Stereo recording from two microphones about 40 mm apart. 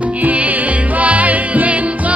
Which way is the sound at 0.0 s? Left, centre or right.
Right.